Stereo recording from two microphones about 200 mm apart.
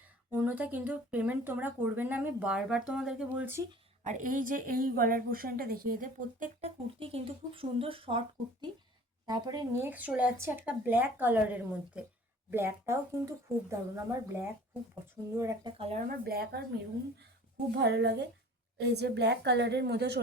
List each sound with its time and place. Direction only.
0.4 s speech: 10° right (ahead or behind)
4.0 s a woman's voice: 40° right (ahead or behind)
7.0 s speech: 25° right (ahead or behind)
9.2 s speech: 20° right (ahead or behind)
15.8 s a woman's voice: 35° right (ahead or behind); by 16.6 s 50° right (ahead or behind)
17.7 s a woman's voice: 60° right (ahead or behind)